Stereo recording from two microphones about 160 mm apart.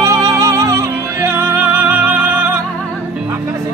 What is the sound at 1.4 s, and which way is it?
Music, 10° right (ahead or behind).